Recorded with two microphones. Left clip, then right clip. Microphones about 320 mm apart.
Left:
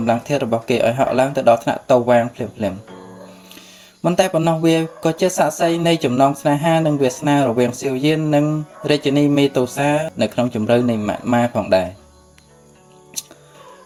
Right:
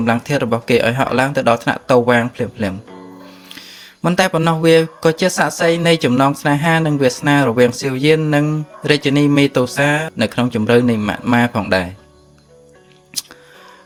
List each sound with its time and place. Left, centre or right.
0.0 s speech: right
4.0 s speech: right